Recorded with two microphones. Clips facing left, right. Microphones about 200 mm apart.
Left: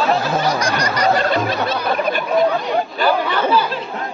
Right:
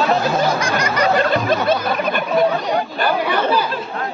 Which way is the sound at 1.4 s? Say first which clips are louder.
Right 2 dB; 50° right (ahead or behind).